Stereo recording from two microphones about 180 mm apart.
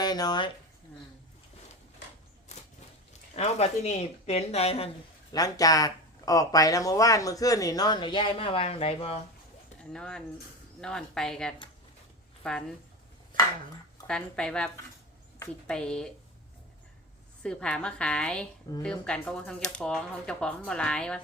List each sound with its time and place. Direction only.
0.0 s speech: 20° left (ahead or behind)
3.3 s speech: 35° left (ahead or behind)
5.3 s speech: 20° left (ahead or behind)
9.9 s a woman's voice: 5° left (ahead or behind)
14.1 s speech: 5° left (ahead or behind)
17.4 s speech: 5° left (ahead or behind)